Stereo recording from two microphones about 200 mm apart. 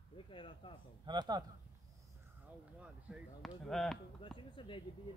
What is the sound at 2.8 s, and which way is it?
Speech, centre (ahead or behind).